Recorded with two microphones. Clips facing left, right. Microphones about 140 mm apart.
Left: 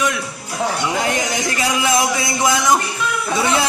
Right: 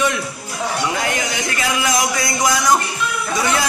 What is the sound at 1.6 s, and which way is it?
A man's voice, 30° left (ahead or behind).